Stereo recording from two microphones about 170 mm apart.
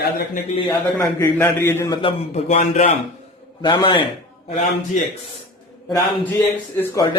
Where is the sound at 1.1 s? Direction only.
10° left (ahead or behind).